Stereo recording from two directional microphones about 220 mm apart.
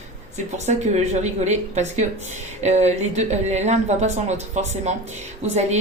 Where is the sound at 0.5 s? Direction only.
30° right (ahead or behind).